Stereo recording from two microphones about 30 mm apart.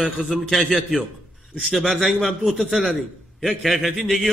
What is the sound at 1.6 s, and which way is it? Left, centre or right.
A man's voice, centre.